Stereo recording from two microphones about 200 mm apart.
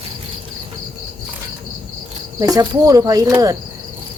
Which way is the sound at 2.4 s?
15° right (ahead or behind).